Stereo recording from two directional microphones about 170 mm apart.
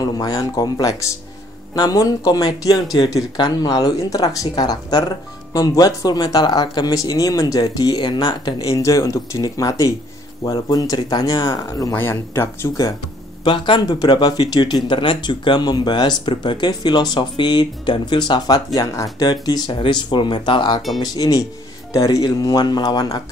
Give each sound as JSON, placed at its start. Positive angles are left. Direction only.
{"t": 0.0, "sound": "speech", "side_deg": 20}
{"t": 13.4, "sound": "speech", "side_deg": 25}